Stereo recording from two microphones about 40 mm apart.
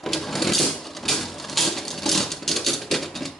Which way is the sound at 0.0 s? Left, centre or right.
Centre.